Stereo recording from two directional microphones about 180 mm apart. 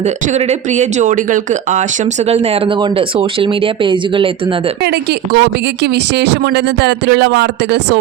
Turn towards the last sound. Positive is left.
turn(degrees=-70)  # may be behind; listen again after turning